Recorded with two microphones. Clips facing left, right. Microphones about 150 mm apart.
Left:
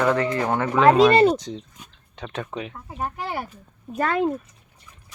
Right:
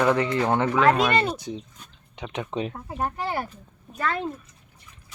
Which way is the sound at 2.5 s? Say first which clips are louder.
Right 4 dB; 30° right (ahead or behind).